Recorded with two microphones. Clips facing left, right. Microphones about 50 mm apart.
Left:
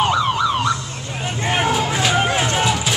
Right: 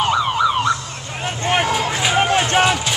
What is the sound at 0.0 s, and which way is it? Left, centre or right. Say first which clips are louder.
Emergency vehicle: right 1 dB; centre.